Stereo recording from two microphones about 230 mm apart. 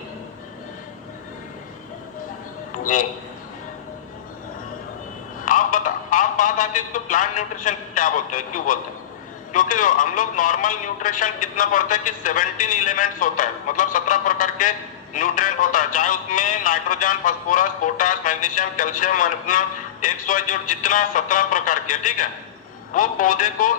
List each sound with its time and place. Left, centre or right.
2.8 s a man's voice: left
5.5 s a man's voice: left